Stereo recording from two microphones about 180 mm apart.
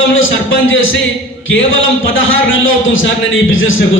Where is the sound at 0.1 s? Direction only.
90° left.